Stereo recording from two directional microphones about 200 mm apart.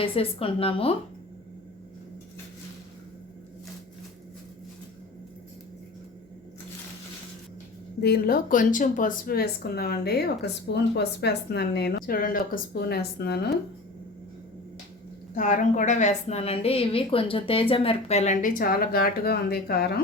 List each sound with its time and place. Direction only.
0.0 s a woman's voice: 25° left (ahead or behind)
8.0 s speech: 50° left (ahead or behind)
15.4 s a woman's voice: 40° left (ahead or behind)